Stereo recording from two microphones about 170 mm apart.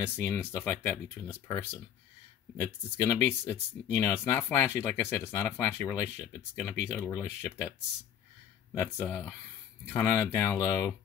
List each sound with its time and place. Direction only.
0.2 s speech: 15° left (ahead or behind)
8.7 s speech: 15° left (ahead or behind)